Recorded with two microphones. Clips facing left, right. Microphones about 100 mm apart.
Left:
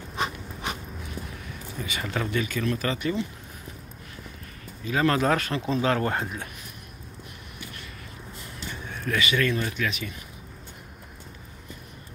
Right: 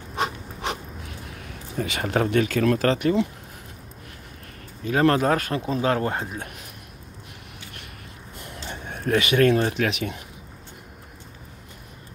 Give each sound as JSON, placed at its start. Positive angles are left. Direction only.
{"t": 0.1, "sound": "a sound", "side_deg": -65}
{"t": 1.8, "sound": "speech", "side_deg": -65}
{"t": 4.8, "sound": "speech", "side_deg": -45}
{"t": 5.8, "sound": "speech", "side_deg": -25}
{"t": 8.9, "sound": "a sound", "side_deg": -35}
{"t": 9.2, "sound": "speech", "side_deg": -60}